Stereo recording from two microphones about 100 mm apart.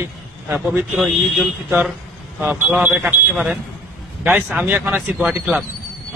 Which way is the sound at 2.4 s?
20° right (ahead or behind).